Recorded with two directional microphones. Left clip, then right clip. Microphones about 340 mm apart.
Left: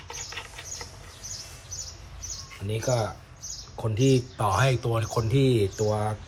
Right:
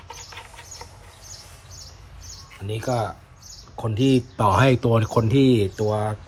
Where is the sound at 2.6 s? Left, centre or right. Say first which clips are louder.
Right 2 dB; centre.